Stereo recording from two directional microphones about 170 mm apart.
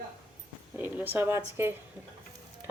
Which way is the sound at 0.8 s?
10° right (ahead or behind).